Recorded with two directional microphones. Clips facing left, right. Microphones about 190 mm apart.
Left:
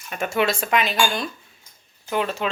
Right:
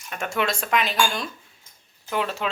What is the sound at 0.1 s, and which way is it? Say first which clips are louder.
Speech: left 4 dB; 5° left (ahead or behind).